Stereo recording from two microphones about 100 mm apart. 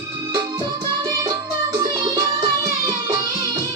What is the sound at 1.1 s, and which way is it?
Music, 40° right (ahead or behind).